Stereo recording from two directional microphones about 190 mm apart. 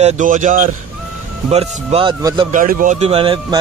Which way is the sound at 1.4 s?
35° right (ahead or behind).